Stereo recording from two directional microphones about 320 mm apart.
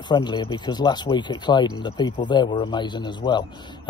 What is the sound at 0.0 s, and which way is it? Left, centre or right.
Speech, centre.